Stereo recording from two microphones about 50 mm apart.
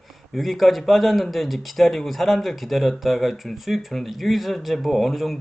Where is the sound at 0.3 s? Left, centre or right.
Centre.